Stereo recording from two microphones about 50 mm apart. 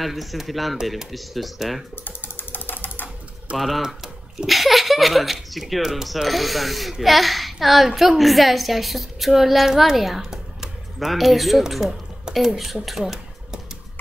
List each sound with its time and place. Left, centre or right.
0.0 s speech: centre
2.0 s ratchet: left
3.5 s speech: centre
10.3 s computer keyboard: centre
11.1 s speech: centre
12.8 s a sound: centre